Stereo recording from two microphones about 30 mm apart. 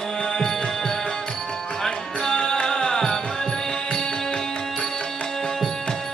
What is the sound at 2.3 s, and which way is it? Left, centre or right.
Music, left.